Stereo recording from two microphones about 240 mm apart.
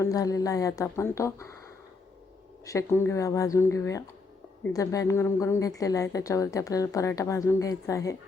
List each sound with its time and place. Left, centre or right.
0.0 s a woman's voice: centre